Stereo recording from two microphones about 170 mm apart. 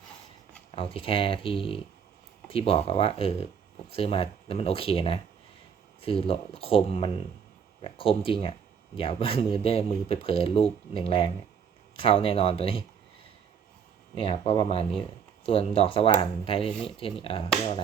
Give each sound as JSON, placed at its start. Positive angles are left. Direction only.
{"t": 0.8, "sound": "speech", "side_deg": 30}
{"t": 14.2, "sound": "speech", "side_deg": 30}